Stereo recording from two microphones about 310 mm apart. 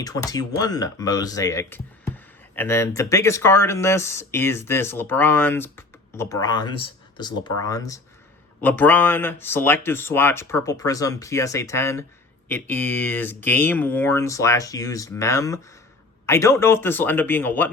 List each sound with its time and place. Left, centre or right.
0.0 s speech: centre